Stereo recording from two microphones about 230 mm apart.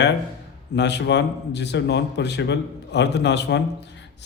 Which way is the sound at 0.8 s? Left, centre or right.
Left.